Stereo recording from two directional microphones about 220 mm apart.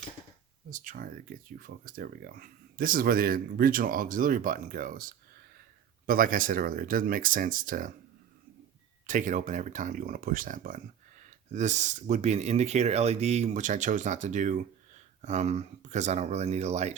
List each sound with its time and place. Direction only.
0.7 s speech: 35° right (ahead or behind)
9.0 s speech: 35° right (ahead or behind)